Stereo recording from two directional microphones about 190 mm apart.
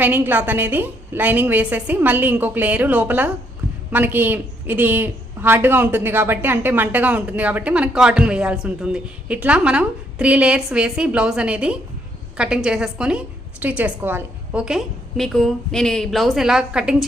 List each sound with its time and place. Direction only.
0.0 s a woman's voice: 10° right (ahead or behind)